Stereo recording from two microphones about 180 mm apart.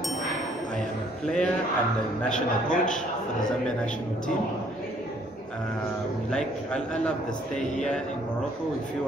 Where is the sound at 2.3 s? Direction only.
5° left (ahead or behind).